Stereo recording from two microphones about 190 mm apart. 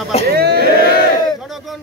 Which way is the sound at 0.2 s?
55° right (ahead or behind).